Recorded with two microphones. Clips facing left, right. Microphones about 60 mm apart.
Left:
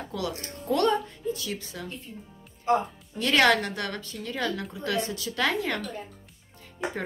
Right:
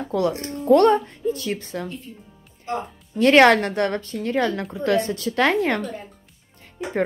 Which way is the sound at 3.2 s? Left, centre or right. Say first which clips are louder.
Right 8 dB; right.